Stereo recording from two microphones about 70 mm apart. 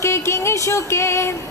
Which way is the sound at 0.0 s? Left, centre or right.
Left.